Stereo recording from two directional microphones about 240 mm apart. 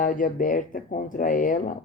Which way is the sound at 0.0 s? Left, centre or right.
Left.